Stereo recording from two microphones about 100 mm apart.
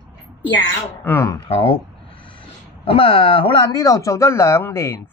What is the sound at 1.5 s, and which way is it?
Speech, 70° left (ahead or behind).